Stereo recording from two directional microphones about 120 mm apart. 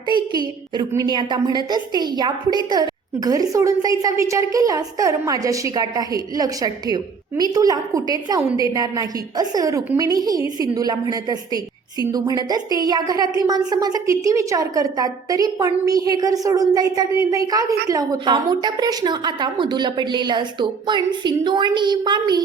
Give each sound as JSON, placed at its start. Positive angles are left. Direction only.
{"t": 0.7, "sound": "a woman's voice", "side_deg": -35}